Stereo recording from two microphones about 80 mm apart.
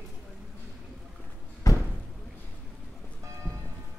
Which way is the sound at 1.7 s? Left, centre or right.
Left.